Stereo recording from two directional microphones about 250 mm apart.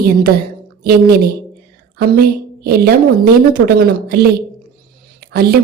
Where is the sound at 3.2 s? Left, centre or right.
Right.